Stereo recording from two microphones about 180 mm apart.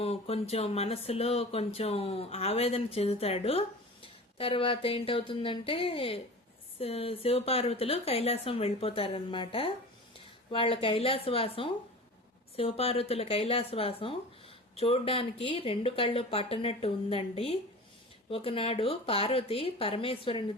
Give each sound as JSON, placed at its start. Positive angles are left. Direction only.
{"t": 0.0, "sound": "speech", "side_deg": 35}